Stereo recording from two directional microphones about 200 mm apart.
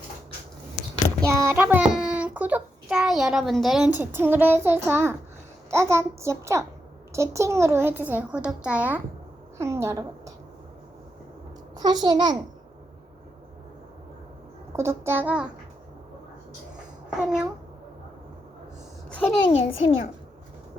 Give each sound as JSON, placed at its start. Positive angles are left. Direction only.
{"t": 1.2, "sound": "a child's voice", "side_deg": -15}
{"t": 11.8, "sound": "a child's voice", "side_deg": -20}
{"t": 14.7, "sound": "a woman's voice", "side_deg": -15}
{"t": 17.1, "sound": "a child's voice", "side_deg": -5}
{"t": 19.7, "sound": "a child's voice", "side_deg": 75}